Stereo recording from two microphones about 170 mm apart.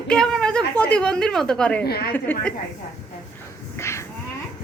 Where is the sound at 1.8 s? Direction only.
65° left (ahead or behind).